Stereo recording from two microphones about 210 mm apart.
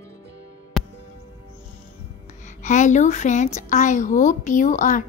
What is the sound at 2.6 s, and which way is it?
A woman's voice, 35° left (ahead or behind).